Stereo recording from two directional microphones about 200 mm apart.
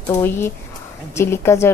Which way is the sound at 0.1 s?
10° left (ahead or behind).